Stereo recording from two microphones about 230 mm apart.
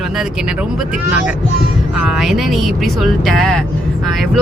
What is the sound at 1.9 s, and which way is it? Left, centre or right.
Speech, centre.